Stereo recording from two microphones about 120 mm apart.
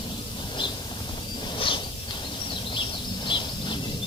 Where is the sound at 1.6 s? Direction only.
45° left (ahead or behind).